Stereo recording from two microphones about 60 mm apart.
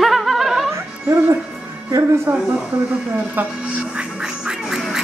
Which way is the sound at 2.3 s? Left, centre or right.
Right.